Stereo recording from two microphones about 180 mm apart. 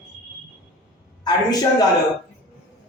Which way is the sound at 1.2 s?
20° left (ahead or behind).